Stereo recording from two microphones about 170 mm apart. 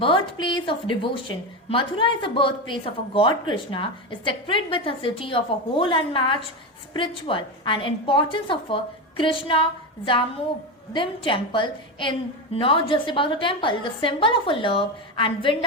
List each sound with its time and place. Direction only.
0.0 s a woman's voice: 30° left (ahead or behind)